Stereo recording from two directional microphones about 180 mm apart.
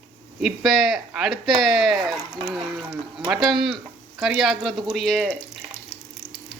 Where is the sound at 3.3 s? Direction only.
Centre (ahead or behind).